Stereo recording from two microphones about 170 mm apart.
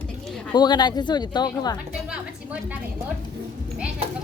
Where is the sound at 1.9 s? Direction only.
5° right (ahead or behind).